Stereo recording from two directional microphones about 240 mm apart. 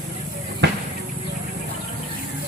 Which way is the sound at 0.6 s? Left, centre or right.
Right.